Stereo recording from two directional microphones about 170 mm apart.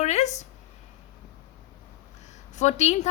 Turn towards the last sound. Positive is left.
turn(degrees=40)  # may be behind; listen again after turning